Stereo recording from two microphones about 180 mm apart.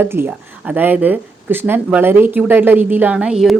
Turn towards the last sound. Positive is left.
turn(degrees=-5)  # may be behind; listen again after turning